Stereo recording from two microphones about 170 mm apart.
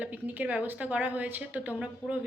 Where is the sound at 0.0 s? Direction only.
10° right (ahead or behind).